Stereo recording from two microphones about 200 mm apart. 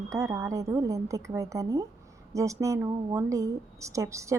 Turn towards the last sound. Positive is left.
turn(degrees=-15)  # may be behind; listen again after turning